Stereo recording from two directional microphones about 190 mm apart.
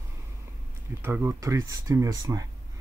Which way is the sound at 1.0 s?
10° right (ahead or behind).